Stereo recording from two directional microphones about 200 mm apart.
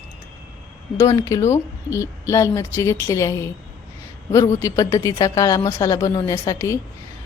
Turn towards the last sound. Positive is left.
turn(degrees=15)  # may be behind; listen again after turning